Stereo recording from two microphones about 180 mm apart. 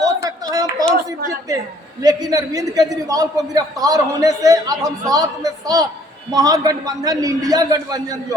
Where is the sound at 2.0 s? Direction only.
20° right (ahead or behind).